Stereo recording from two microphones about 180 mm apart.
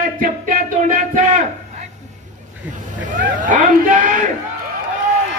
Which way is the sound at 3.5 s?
45° right (ahead or behind).